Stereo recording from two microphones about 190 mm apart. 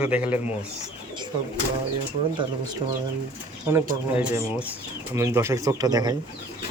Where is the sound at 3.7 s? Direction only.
15° right (ahead or behind).